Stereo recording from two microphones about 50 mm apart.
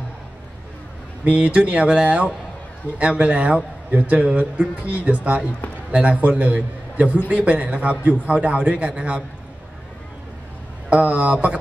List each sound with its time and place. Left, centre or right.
1.2 s a man's voice: right
10.9 s a man's voice: right